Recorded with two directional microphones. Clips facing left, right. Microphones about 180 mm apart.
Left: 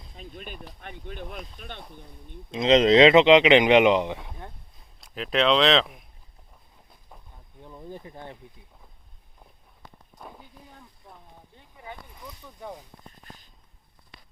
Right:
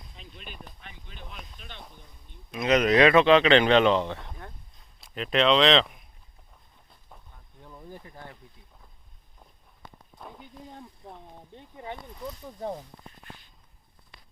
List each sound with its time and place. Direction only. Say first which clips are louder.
0.2 s speech: left 6 dB; 45° left (ahead or behind)
2.5 s speech: left 4 dB; 25° left (ahead or behind)
4.9 s speech: even; centre (ahead or behind)
7.6 s speech: left 4 dB; 15° left (ahead or behind)
11.5 s a sound: right 4 dB; 25° right (ahead or behind)
13.2 s a sound: right 1 dB; 40° left (ahead or behind)